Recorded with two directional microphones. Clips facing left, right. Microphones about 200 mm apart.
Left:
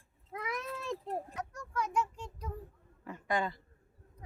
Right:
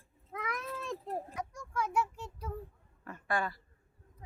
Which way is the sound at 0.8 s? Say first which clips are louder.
Left 1 dB; centre (ahead or behind).